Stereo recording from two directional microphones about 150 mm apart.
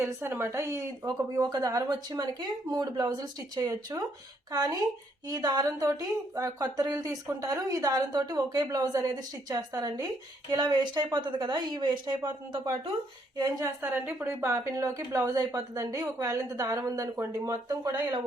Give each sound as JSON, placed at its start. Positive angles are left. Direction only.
{"t": 0.0, "sound": "a woman's voice", "side_deg": -15}
{"t": 13.3, "sound": "a woman's voice", "side_deg": -25}
{"t": 13.8, "sound": "a woman's voice", "side_deg": -15}